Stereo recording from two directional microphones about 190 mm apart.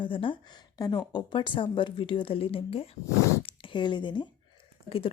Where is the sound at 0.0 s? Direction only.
25° left (ahead or behind).